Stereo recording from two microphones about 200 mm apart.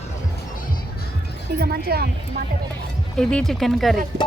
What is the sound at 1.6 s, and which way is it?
Speech, 50° right (ahead or behind).